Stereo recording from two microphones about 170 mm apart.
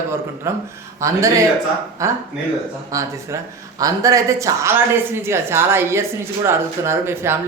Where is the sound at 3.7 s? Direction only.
20° right (ahead or behind).